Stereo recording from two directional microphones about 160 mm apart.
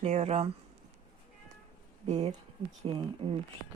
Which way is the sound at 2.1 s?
40° right (ahead or behind).